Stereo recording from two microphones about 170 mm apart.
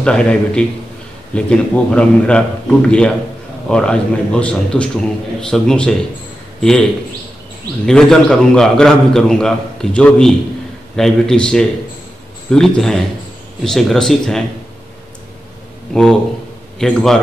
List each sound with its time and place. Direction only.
0.0 s a man's voice: 5° left (ahead or behind)
7.8 s a man's voice: 5° left (ahead or behind)
15.9 s a man's voice: 5° left (ahead or behind)